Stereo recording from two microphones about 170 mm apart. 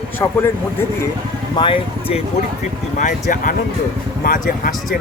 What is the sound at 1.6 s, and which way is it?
Speech, 30° left (ahead or behind).